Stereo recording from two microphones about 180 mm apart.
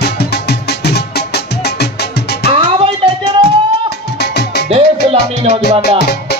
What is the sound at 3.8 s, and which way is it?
Music, 65° left (ahead or behind).